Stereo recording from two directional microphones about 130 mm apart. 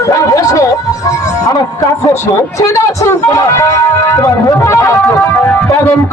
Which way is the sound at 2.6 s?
25° left (ahead or behind).